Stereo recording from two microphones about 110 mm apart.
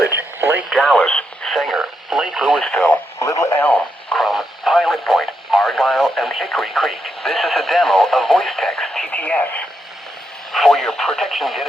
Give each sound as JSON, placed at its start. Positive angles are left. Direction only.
{"t": 0.1, "sound": "radio", "side_deg": -20}
{"t": 0.7, "sound": "radio", "side_deg": 5}
{"t": 1.5, "sound": "radio", "side_deg": -5}
{"t": 2.6, "sound": "radio", "side_deg": 5}
{"t": 3.2, "sound": "radio", "side_deg": 30}
{"t": 4.2, "sound": "radio", "side_deg": 0}
{"t": 10.5, "sound": "radio", "side_deg": 0}